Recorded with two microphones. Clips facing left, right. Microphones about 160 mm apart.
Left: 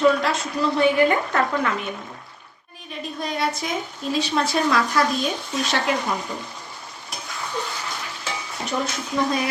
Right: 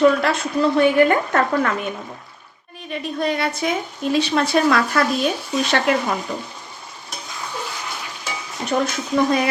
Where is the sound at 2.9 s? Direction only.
65° right (ahead or behind).